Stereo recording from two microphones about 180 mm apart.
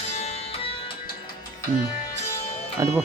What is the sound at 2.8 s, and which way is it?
Music, 20° right (ahead or behind).